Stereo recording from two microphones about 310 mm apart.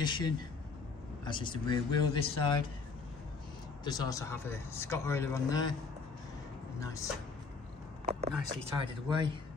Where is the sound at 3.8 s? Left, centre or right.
Centre.